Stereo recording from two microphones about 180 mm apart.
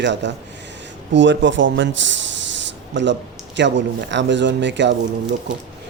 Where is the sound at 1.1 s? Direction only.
90° right.